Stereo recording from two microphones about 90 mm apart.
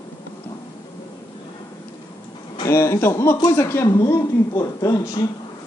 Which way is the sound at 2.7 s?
30° left (ahead or behind).